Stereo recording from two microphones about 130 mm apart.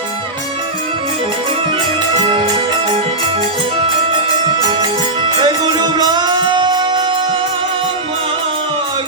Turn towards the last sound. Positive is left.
turn(degrees=-40)  # may be behind; listen again after turning